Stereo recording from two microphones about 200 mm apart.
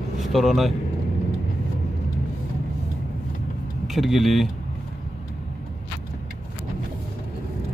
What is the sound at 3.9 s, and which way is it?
Speech, centre (ahead or behind).